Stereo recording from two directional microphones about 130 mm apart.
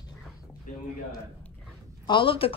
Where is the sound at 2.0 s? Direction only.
40° left (ahead or behind).